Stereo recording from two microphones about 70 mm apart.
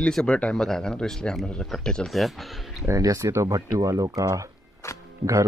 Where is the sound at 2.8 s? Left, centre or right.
Right.